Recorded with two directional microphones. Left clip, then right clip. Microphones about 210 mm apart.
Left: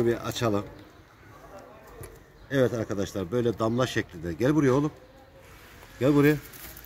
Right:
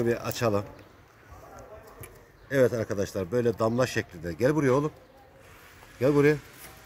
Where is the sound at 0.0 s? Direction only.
20° right (ahead or behind).